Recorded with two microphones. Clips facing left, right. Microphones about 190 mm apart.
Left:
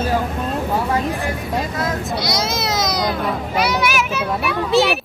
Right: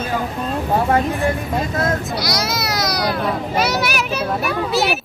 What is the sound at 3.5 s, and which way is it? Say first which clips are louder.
Speech: left 2 dB; 40° right (ahead or behind).